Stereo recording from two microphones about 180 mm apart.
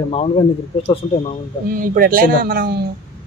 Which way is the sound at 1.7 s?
50° right (ahead or behind).